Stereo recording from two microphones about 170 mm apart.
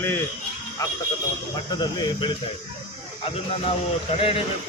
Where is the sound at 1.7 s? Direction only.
25° left (ahead or behind).